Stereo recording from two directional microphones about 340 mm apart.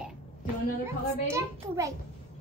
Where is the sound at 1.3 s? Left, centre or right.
Centre.